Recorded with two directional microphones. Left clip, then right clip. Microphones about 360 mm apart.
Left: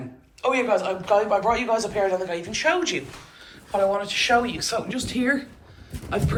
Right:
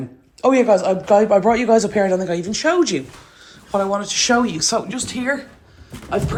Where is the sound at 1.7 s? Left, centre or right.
Right.